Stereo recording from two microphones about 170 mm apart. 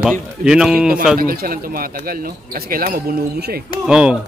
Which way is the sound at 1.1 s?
60° right (ahead or behind).